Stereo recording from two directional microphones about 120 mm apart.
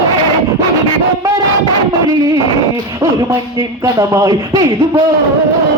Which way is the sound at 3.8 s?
30° right (ahead or behind).